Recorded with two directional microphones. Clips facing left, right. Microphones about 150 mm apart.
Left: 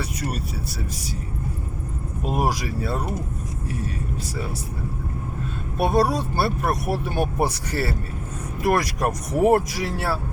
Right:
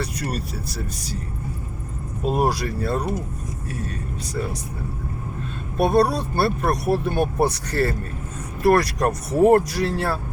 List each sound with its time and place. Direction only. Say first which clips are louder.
0.0 s speech: right 1 dB; 5° left (ahead or behind)
2.2 s speech: right 3 dB; 10° left (ahead or behind)
5.8 s speech: right 2 dB; 10° left (ahead or behind)